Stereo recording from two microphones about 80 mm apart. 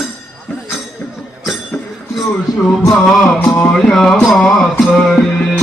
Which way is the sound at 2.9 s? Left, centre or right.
Centre.